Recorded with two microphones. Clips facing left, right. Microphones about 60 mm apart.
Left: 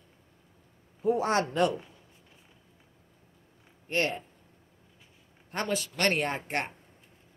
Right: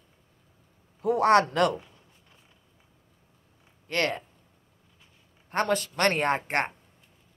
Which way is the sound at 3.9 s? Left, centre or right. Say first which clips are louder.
Right 2 dB; right.